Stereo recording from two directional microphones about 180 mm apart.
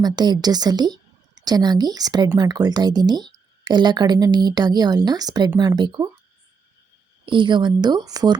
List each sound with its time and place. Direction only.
0.0 s speech: 20° right (ahead or behind)
7.3 s speech: 25° right (ahead or behind)